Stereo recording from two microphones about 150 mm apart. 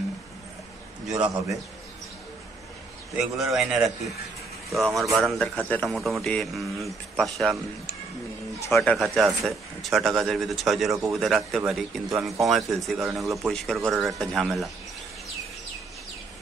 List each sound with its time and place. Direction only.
1.1 s a man's voice: 25° right (ahead or behind)
3.5 s speech: 5° right (ahead or behind)
5.6 s a man's voice: 10° left (ahead or behind)
5.9 s speech: centre (ahead or behind)
12.1 s a man's voice: 20° right (ahead or behind)
12.4 s speech: centre (ahead or behind)